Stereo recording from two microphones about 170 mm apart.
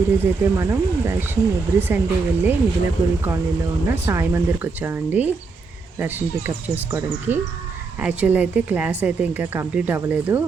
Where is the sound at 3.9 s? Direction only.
15° right (ahead or behind).